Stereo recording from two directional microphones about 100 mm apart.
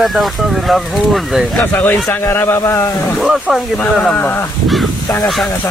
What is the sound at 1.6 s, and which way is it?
Speech, 15° left (ahead or behind).